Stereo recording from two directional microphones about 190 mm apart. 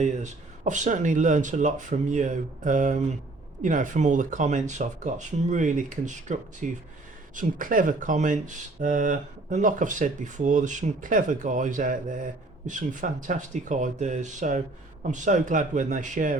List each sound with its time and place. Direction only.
0.0 s speech: 40° right (ahead or behind)